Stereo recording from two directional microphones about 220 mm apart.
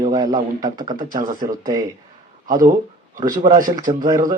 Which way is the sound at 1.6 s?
20° right (ahead or behind).